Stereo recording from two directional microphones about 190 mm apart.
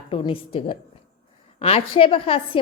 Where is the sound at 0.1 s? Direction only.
30° left (ahead or behind).